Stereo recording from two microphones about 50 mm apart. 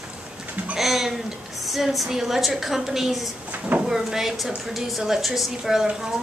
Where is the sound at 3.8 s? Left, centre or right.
Centre.